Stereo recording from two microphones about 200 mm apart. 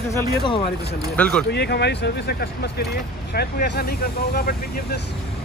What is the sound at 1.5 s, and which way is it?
Speech, 55° left (ahead or behind).